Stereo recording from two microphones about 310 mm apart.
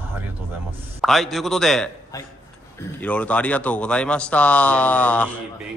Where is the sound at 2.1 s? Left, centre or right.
Centre.